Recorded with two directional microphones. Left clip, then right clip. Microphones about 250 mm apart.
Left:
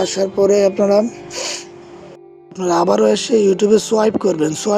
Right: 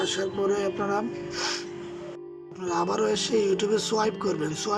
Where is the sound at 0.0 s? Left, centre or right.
Centre.